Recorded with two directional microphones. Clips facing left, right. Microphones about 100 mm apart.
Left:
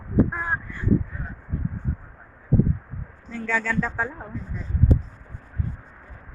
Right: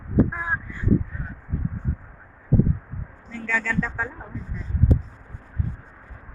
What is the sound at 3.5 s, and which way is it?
Speech, 15° left (ahead or behind).